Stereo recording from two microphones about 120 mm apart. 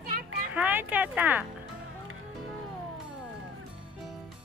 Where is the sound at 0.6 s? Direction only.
15° right (ahead or behind).